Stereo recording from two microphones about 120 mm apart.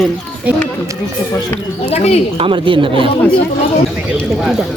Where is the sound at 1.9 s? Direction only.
60° left (ahead or behind).